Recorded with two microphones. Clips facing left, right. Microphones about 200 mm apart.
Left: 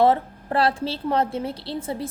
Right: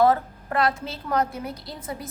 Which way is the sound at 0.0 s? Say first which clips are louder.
Left 1 dB; 25° left (ahead or behind).